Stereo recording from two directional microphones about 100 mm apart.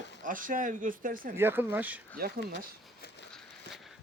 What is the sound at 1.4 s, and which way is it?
Speech, 20° right (ahead or behind).